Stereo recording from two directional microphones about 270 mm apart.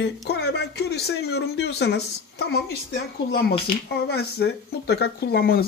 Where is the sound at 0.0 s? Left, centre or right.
Left.